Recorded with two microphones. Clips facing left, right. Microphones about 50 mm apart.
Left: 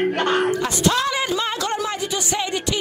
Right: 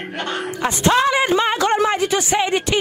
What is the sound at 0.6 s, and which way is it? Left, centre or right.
Speech, right.